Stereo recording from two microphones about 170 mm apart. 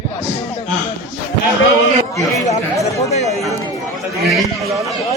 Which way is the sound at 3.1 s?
40° left (ahead or behind).